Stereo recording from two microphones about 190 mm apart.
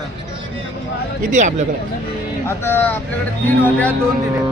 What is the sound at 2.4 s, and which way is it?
Speech, 10° left (ahead or behind).